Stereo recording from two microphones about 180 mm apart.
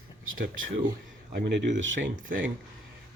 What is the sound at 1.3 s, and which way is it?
Speech, 75° right (ahead or behind).